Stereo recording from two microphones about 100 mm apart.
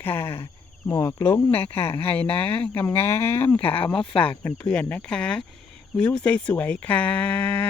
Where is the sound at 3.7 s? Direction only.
60° left (ahead or behind).